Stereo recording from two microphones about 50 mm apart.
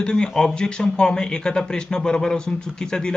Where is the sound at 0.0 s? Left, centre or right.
Centre.